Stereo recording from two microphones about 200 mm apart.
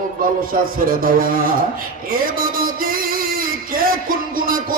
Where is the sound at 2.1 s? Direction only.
45° right (ahead or behind).